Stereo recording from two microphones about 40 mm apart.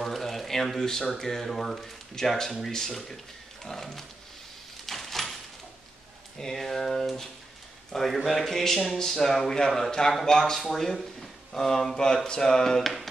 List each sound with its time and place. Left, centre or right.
0.1 s speech: centre
4.8 s a sound: centre
6.3 s speech: centre